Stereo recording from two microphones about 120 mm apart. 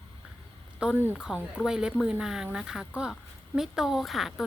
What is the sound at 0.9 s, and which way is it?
Speech, 20° right (ahead or behind).